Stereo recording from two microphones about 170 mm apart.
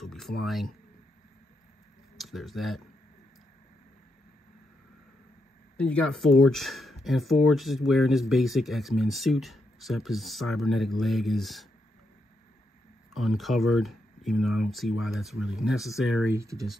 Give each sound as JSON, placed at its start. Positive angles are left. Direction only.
{"t": 0.0, "sound": "a sound", "side_deg": 0}
{"t": 0.4, "sound": "speech", "side_deg": 0}
{"t": 2.1, "sound": "speech", "side_deg": 0}
{"t": 5.8, "sound": "speech", "side_deg": 5}
{"t": 13.1, "sound": "speech", "side_deg": 0}
{"t": 16.3, "sound": "speech", "side_deg": -15}